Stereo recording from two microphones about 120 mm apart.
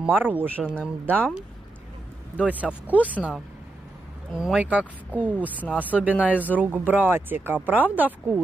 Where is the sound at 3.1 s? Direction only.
10° right (ahead or behind).